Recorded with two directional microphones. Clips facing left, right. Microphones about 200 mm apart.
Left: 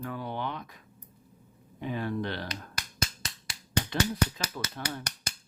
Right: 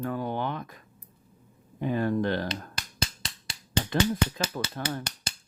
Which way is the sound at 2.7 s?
25° right (ahead or behind).